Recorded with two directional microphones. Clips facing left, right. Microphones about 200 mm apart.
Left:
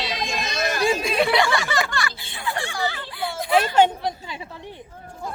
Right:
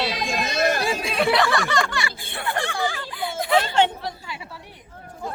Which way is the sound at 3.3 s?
25° right (ahead or behind).